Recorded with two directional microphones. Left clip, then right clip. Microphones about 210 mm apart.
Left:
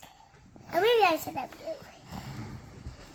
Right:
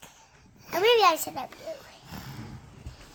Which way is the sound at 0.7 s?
45° right (ahead or behind).